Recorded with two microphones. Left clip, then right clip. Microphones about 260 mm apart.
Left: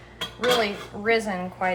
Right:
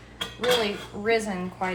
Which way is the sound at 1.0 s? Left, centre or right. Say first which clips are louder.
Left 2 dB; centre.